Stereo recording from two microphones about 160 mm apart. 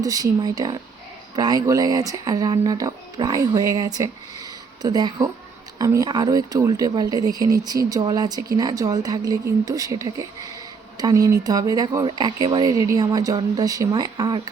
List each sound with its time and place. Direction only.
0.0 s speech: 20° right (ahead or behind)